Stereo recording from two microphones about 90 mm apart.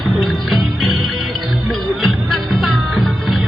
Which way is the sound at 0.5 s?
Centre (ahead or behind).